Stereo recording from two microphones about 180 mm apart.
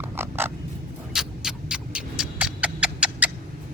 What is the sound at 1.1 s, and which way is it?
Rodents, 5° right (ahead or behind).